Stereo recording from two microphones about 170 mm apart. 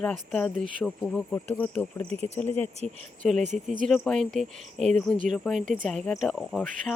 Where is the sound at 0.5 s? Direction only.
50° right (ahead or behind).